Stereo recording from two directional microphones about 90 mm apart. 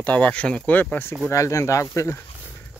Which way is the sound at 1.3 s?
35° left (ahead or behind).